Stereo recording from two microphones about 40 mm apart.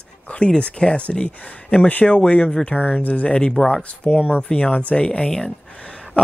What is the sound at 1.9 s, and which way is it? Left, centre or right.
Speech, left.